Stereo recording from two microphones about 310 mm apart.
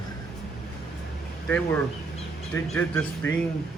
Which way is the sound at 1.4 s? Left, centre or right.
Centre.